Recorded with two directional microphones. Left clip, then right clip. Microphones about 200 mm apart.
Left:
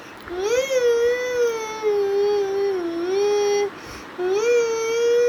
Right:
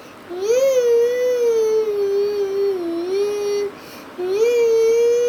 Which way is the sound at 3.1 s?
30° right (ahead or behind).